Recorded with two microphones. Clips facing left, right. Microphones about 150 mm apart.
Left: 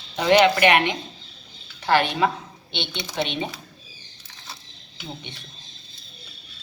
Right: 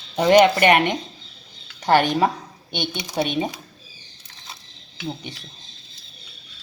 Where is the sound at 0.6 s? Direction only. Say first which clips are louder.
Right 2 dB; 45° right (ahead or behind).